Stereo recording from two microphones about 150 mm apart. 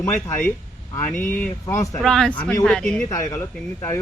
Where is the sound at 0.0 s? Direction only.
15° left (ahead or behind).